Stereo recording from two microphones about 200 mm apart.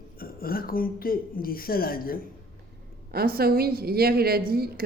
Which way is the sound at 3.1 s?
50° right (ahead or behind).